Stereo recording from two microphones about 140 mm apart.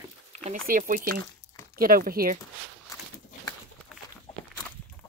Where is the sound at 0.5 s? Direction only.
85° right.